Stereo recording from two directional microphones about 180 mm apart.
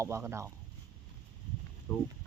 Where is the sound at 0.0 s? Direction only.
15° right (ahead or behind).